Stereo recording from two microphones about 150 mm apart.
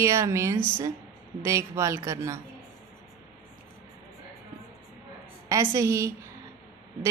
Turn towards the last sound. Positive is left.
turn(degrees=-20)  # may be behind; listen again after turning